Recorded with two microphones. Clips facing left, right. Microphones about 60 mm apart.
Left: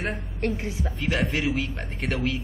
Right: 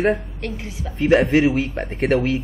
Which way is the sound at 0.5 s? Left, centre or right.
Left.